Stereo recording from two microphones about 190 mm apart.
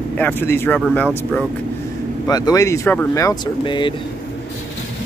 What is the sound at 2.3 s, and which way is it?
Speech, 20° left (ahead or behind).